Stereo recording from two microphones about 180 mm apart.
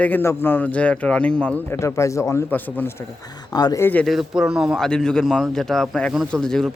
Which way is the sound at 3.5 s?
20° left (ahead or behind).